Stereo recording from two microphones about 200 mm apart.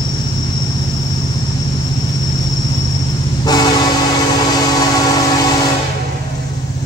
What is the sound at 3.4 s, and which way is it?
Train, 20° left (ahead or behind).